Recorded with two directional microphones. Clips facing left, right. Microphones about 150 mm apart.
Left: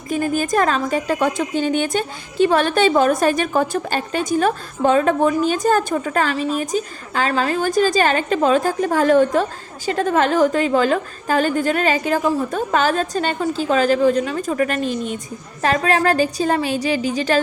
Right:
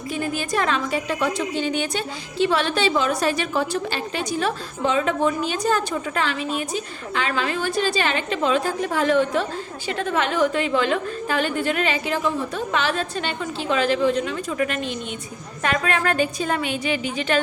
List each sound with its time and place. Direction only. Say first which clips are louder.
0.1 s a woman's voice: left 6 dB; 45° left (ahead or behind)